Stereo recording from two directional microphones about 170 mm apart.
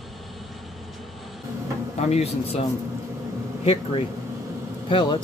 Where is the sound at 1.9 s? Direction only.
40° left (ahead or behind).